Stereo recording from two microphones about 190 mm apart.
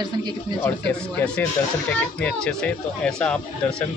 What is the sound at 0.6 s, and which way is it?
Speech, 5° left (ahead or behind).